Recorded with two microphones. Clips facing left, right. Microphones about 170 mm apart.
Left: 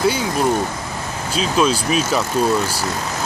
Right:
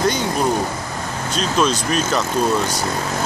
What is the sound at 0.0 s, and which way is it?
Speech, 5° left (ahead or behind).